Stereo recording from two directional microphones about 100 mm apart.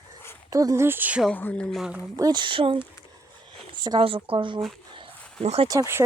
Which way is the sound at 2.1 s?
40° right (ahead or behind).